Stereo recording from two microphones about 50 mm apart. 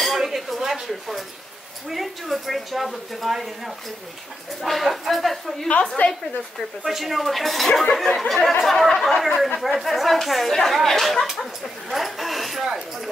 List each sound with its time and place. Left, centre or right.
0.0 s dishes: centre
1.9 s a woman's voice: centre
5.7 s a woman's voice: left
6.8 s a woman's voice: centre